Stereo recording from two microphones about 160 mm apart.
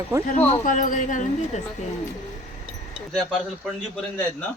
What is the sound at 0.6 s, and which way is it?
Speech, 55° left (ahead or behind).